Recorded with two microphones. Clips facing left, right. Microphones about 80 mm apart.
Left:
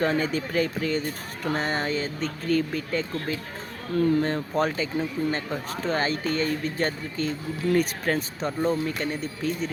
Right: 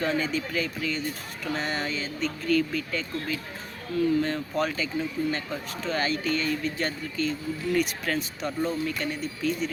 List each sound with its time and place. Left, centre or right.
0.0 s speech: left
3.9 s speech: left